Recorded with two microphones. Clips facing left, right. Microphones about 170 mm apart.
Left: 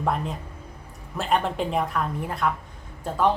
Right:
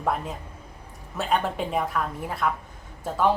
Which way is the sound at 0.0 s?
Centre (ahead or behind).